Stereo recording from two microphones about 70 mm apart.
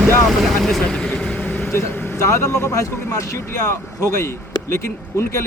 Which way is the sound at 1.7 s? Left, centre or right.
Left.